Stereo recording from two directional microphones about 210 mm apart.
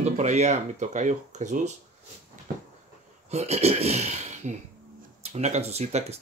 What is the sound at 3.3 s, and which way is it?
Speech, 30° right (ahead or behind).